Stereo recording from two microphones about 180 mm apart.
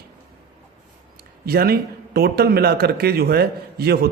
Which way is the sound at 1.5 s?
60° right (ahead or behind).